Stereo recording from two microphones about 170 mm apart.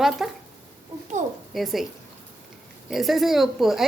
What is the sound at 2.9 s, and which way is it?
Speech, centre (ahead or behind).